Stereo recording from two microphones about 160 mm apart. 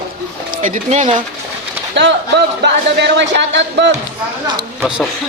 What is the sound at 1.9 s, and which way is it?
Speech, 90° right.